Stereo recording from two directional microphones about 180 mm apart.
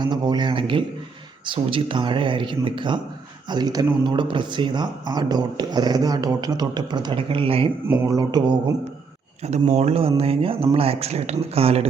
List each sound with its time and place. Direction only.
0.0 s speech: 25° right (ahead or behind)
7.9 s speech: 15° right (ahead or behind)
9.4 s speech: 40° right (ahead or behind)